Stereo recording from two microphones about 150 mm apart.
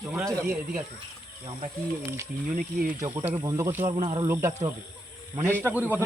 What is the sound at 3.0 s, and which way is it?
Speech, 20° right (ahead or behind).